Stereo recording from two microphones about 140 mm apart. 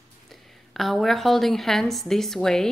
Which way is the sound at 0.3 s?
Centre (ahead or behind).